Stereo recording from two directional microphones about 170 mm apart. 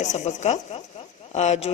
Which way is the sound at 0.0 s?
45° left (ahead or behind).